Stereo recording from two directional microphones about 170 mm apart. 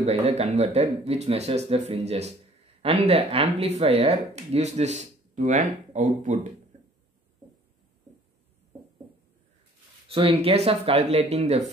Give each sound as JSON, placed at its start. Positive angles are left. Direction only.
{"t": 0.0, "sound": "speech", "side_deg": -40}
{"t": 6.7, "sound": "a sound", "side_deg": -45}
{"t": 10.0, "sound": "speech", "side_deg": -35}